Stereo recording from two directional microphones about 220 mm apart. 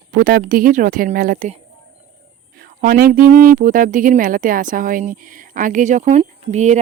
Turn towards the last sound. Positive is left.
turn(degrees=-30)  # may be behind; listen again after turning